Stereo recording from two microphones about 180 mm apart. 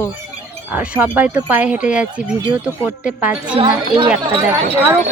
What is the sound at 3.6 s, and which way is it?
Speech, 25° right (ahead or behind).